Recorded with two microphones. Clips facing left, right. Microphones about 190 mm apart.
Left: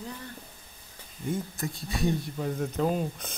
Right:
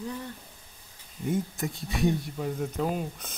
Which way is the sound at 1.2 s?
20° right (ahead or behind).